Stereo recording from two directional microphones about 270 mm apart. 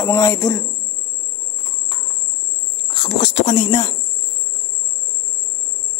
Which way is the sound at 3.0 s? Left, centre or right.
Left.